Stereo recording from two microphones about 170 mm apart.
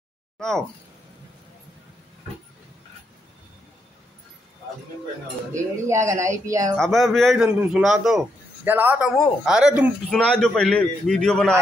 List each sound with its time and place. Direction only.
0.4 s speech: 5° left (ahead or behind)
5.9 s speech: 15° right (ahead or behind)
6.8 s a man's voice: centre (ahead or behind)